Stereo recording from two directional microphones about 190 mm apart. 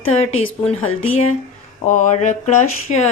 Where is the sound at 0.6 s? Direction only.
5° left (ahead or behind).